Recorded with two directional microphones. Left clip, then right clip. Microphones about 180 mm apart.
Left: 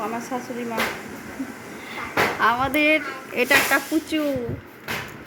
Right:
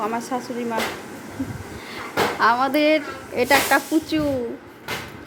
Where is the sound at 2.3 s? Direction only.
10° right (ahead or behind).